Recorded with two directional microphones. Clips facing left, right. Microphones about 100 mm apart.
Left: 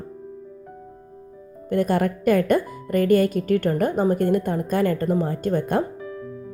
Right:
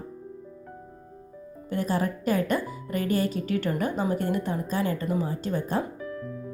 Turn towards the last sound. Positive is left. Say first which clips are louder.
# left 6 dB
turn(degrees=55)  # may be behind; listen again after turning